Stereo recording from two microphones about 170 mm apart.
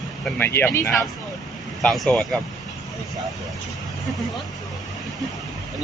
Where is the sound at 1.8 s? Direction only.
5° left (ahead or behind).